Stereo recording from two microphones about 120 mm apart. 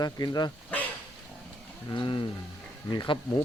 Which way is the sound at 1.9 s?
45° left (ahead or behind).